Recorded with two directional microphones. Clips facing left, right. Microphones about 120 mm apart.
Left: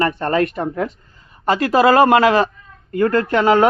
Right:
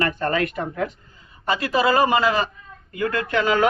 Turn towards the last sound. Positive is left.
turn(degrees=40)  # may be behind; listen again after turning